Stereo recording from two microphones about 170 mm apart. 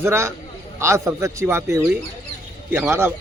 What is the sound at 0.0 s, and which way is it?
A man's voice, 15° right (ahead or behind).